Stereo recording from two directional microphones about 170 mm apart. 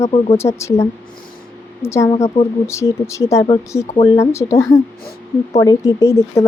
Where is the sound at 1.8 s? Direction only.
15° left (ahead or behind).